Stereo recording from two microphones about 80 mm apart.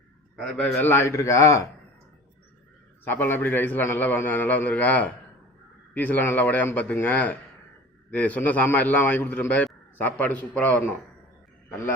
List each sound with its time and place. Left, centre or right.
0.6 s speech: left
3.0 s a man's voice: left